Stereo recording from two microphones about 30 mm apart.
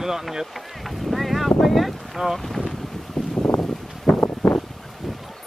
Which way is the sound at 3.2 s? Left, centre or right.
Centre.